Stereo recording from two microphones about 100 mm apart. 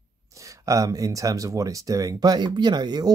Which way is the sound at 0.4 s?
35° right (ahead or behind).